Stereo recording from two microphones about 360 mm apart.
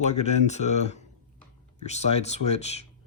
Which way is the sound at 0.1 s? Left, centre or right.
Centre.